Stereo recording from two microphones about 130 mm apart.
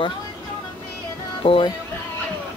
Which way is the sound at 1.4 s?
45° left (ahead or behind).